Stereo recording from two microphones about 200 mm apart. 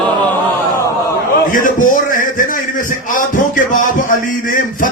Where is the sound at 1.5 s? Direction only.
40° left (ahead or behind).